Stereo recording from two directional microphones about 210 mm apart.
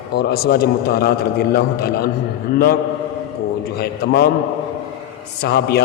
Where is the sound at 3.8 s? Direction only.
50° left (ahead or behind).